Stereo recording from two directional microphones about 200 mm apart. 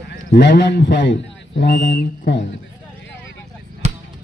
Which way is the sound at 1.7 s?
55° left (ahead or behind).